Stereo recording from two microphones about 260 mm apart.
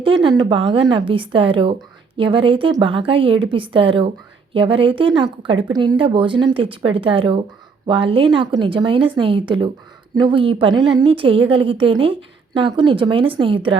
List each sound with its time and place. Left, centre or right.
0.0 s a woman's voice: centre